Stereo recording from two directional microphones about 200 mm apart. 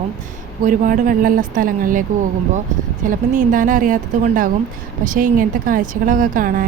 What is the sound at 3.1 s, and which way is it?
A woman's voice, 40° right (ahead or behind).